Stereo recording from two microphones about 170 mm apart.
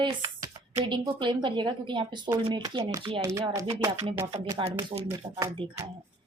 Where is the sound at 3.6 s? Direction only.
35° right (ahead or behind).